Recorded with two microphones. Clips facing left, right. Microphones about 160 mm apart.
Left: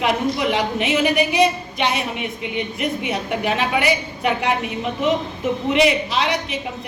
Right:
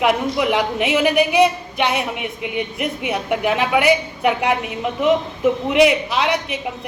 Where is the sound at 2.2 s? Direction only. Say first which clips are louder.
Right 1 dB; 10° right (ahead or behind).